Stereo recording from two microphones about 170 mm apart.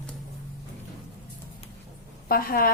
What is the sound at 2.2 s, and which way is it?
Speech, 60° left (ahead or behind).